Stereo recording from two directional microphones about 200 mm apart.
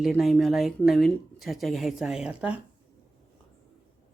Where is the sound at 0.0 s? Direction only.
Centre (ahead or behind).